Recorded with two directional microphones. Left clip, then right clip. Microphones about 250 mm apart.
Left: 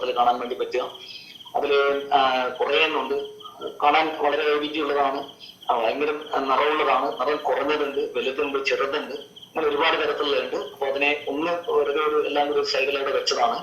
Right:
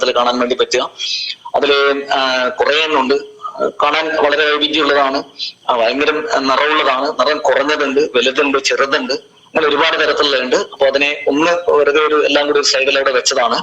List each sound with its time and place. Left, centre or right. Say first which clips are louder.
0.0 s a man's voice: right 8 dB; right